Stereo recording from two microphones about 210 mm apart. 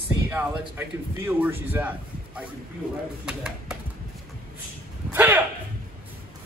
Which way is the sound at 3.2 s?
5° right (ahead or behind).